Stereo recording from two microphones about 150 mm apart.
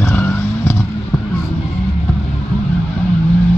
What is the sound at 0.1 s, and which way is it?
Vehicle, 15° left (ahead or behind).